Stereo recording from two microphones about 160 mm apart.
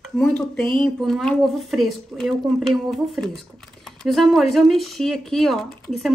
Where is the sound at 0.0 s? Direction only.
5° left (ahead or behind).